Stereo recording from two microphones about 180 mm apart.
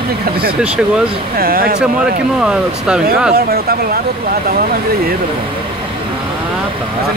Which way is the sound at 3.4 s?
55° right (ahead or behind).